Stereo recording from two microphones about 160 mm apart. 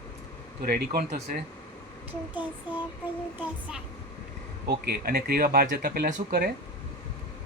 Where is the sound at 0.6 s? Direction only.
70° right (ahead or behind).